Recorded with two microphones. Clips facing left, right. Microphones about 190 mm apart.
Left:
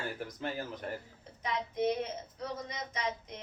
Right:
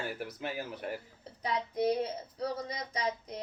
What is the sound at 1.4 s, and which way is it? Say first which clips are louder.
Speech: right 1 dB; 35° right (ahead or behind).